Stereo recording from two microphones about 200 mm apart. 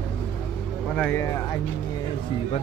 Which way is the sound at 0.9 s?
10° left (ahead or behind).